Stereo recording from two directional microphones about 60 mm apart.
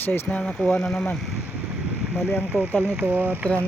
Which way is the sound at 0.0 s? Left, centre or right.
Left.